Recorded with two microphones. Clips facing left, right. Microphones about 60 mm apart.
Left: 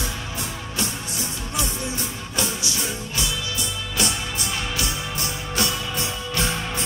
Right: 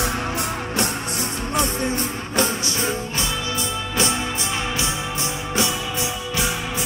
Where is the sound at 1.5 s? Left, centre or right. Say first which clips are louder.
Right 7 dB; right.